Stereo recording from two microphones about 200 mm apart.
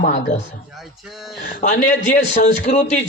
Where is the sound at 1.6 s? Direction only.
45° left (ahead or behind).